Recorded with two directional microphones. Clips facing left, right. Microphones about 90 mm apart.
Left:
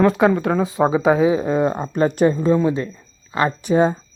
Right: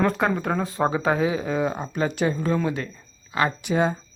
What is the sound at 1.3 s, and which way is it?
Speech, 35° left (ahead or behind).